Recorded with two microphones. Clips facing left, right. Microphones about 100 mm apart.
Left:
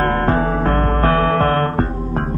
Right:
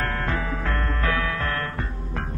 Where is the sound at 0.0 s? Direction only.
45° left (ahead or behind).